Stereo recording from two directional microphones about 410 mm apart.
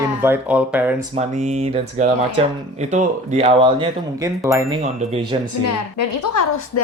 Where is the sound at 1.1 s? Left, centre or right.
Centre.